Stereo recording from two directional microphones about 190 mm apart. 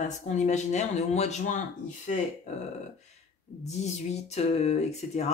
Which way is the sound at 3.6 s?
35° left (ahead or behind).